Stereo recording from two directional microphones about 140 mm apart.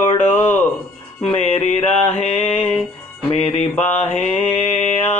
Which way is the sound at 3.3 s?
50° left (ahead or behind).